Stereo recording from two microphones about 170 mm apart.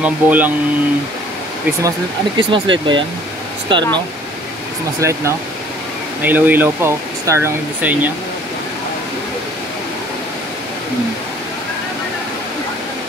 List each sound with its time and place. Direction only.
0.0 s speech: 10° right (ahead or behind)
1.8 s speech: 25° right (ahead or behind)
5.0 s speech: 15° right (ahead or behind)
6.2 s speech: 10° right (ahead or behind)